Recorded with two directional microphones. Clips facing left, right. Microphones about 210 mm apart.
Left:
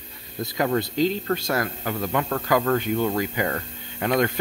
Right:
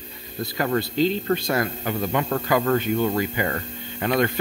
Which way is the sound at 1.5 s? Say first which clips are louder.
Right 2 dB; 10° right (ahead or behind).